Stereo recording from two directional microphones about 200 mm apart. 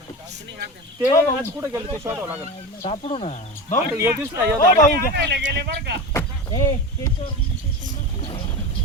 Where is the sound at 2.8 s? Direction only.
30° left (ahead or behind).